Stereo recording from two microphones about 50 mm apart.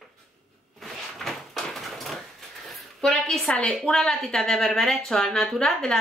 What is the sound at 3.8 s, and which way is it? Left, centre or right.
Speech, centre.